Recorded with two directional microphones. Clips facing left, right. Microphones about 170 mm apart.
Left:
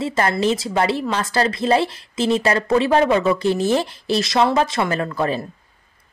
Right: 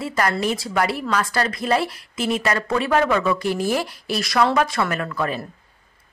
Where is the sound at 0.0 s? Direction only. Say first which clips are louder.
Left 3 dB; 25° left (ahead or behind).